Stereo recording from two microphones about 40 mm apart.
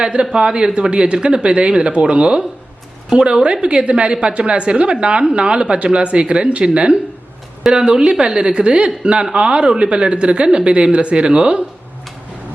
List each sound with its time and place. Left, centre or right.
0.0 s speech: right